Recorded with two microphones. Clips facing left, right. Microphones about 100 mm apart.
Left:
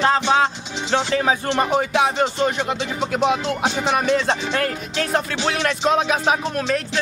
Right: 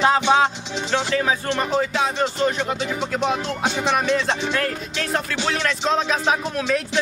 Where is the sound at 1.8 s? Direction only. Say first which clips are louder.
Left 3 dB; 60° left (ahead or behind).